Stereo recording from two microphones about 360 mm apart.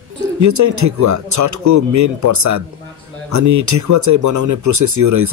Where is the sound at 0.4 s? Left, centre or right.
Right.